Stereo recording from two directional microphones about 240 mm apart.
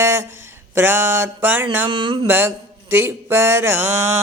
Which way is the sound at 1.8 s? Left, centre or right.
Right.